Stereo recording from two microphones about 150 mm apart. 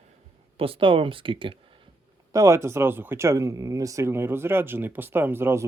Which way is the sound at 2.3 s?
20° right (ahead or behind).